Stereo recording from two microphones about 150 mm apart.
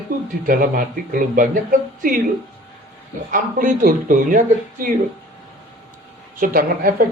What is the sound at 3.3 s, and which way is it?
Speech, 65° right (ahead or behind).